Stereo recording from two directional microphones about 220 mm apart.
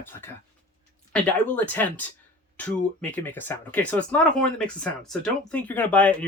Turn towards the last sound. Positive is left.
turn(degrees=5)  # may be behind; listen again after turning